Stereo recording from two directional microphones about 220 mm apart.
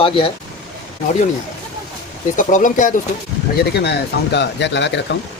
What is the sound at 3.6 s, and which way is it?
Speech, 50° left (ahead or behind).